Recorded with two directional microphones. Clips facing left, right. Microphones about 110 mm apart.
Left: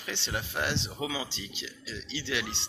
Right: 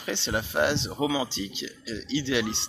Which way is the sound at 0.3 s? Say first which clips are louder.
Right 7 dB; 25° right (ahead or behind).